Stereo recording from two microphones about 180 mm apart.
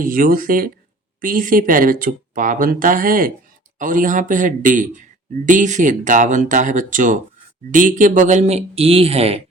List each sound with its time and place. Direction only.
0.0 s speech: 50° right (ahead or behind); by 9.4 s 35° right (ahead or behind)